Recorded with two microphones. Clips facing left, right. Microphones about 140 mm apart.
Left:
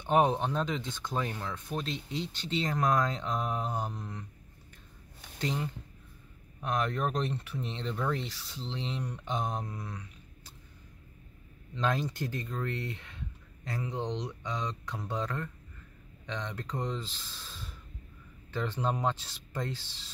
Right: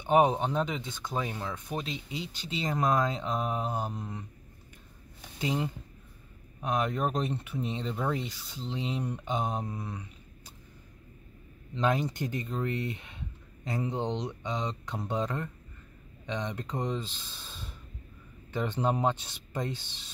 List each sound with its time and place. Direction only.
0.0 s speech: 10° right (ahead or behind)
6.7 s speech: 10° right (ahead or behind)
9.2 s mantra: 5° right (ahead or behind)
9.7 s speech: 30° right (ahead or behind)
11.8 s speech: 15° right (ahead or behind)